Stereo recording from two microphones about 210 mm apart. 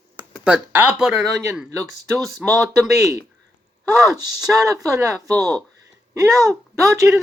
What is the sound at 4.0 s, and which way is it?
Speech, 15° right (ahead or behind).